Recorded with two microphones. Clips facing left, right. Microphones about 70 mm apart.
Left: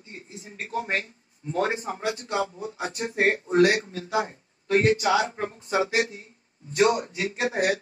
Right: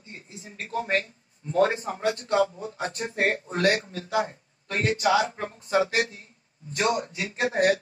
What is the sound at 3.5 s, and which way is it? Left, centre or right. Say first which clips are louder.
Speech: left 4 dB; left.